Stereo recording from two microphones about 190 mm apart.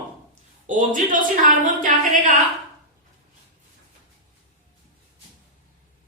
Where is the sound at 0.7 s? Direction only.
45° right (ahead or behind).